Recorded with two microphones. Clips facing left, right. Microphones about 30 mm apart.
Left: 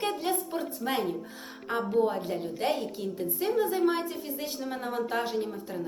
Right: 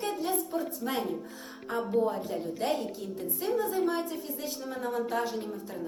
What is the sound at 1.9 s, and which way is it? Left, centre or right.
A woman's voice, left.